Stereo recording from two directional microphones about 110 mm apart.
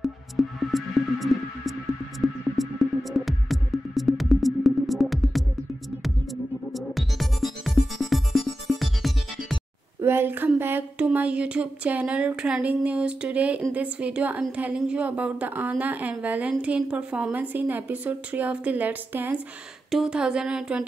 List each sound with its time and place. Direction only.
0.0 s music: centre (ahead or behind)
6.7 s music: centre (ahead or behind)
10.0 s a sound: 20° right (ahead or behind)
11.1 s a woman's voice: 10° right (ahead or behind)
19.9 s a woman's voice: 5° right (ahead or behind)